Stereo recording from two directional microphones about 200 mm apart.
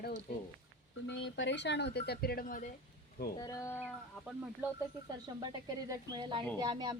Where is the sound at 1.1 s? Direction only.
65° left (ahead or behind); by 2.7 s 40° left (ahead or behind).